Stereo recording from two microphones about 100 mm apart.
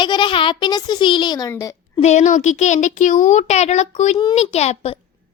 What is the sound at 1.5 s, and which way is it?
Speech, 30° left (ahead or behind).